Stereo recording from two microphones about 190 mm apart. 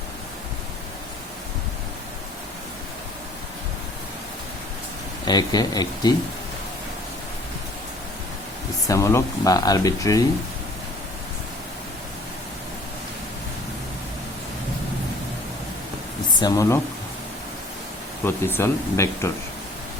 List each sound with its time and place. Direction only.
5.2 s speech: 20° left (ahead or behind)
8.9 s speech: 15° left (ahead or behind)
16.4 s speech: 15° left (ahead or behind)
18.3 s speech: 10° left (ahead or behind)